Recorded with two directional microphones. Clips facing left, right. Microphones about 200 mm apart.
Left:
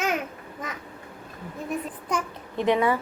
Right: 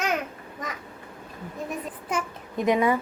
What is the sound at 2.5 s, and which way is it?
Speech, 15° right (ahead or behind).